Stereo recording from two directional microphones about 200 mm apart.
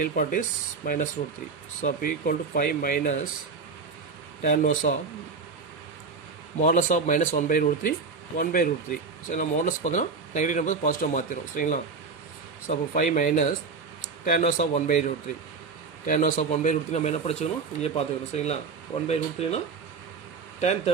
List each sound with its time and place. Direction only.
0.0 s speech: 40° left (ahead or behind)
4.4 s speech: 40° left (ahead or behind)
6.6 s speech: 40° left (ahead or behind)
20.6 s speech: 35° left (ahead or behind)